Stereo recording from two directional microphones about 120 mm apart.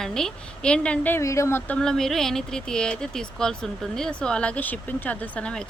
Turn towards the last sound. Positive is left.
turn(degrees=10)  # may be behind; listen again after turning